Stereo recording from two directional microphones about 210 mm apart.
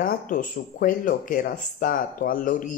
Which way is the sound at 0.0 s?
40° left (ahead or behind).